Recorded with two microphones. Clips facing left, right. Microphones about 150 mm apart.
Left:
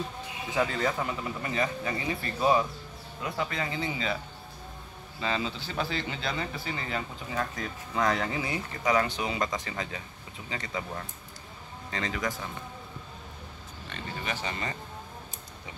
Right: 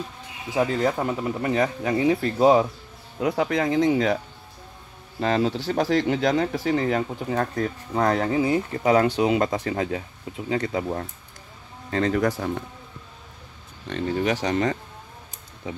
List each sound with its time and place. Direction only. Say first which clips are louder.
0.8 s speech: right 6 dB; 45° right (ahead or behind); by 4.2 s 75° right (ahead or behind)
5.2 s speech: right 9 dB; 65° right (ahead or behind)
7.3 s speech: right 7 dB; 50° right (ahead or behind)
11.9 s speech: right 11 dB; 55° right (ahead or behind)
13.8 s speech: right 13 dB; 70° right (ahead or behind)